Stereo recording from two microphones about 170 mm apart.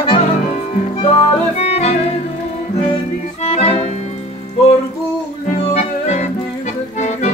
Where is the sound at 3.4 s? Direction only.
40° left (ahead or behind).